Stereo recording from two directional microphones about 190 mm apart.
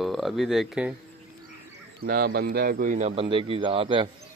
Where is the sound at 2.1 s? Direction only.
55° right (ahead or behind); by 4.1 s 30° right (ahead or behind).